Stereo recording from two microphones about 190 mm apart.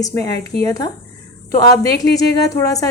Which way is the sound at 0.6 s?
20° left (ahead or behind).